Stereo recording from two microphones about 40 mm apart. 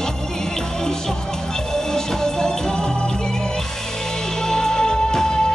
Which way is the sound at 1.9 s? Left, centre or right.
Centre.